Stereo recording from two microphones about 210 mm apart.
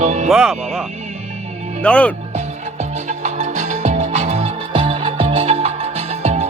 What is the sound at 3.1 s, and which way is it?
Music, 35° right (ahead or behind).